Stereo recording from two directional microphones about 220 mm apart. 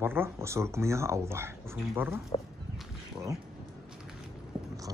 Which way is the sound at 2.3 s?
25° left (ahead or behind).